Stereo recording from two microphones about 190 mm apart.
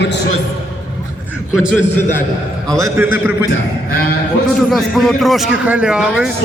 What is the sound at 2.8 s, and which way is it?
Speech, 10° right (ahead or behind).